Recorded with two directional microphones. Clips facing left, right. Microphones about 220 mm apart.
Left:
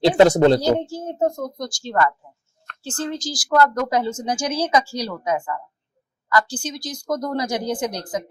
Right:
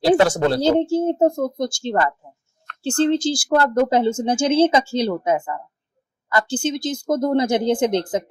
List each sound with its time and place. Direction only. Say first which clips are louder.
0.2 s speech: left 4 dB; 20° left (ahead or behind)
0.6 s speech: right 4 dB; 25° right (ahead or behind)